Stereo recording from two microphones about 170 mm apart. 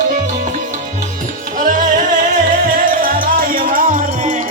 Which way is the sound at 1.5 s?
50° right (ahead or behind).